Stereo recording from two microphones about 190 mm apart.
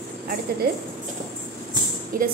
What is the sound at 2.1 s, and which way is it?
Speech, 45° right (ahead or behind).